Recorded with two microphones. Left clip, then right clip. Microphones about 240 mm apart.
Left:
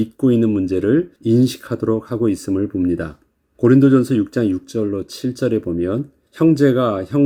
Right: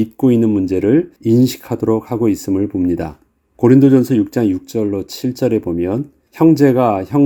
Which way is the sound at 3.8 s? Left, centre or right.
Right.